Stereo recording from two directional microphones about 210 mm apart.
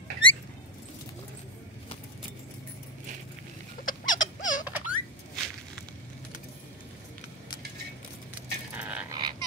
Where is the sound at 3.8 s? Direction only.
40° left (ahead or behind).